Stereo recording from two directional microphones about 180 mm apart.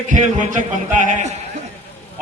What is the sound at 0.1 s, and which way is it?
A man's voice, 45° right (ahead or behind).